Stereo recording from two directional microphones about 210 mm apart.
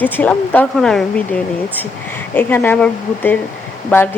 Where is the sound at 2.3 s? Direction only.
10° left (ahead or behind).